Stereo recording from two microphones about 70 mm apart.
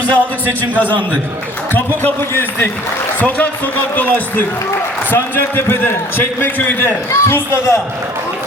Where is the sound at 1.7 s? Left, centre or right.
Left.